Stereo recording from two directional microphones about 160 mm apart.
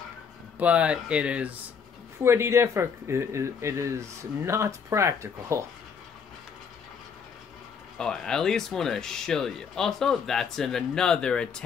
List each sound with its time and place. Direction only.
0.6 s speech: 10° right (ahead or behind)
8.0 s speech: 5° left (ahead or behind)